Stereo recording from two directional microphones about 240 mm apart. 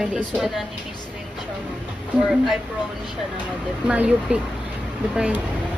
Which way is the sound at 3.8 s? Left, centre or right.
Centre.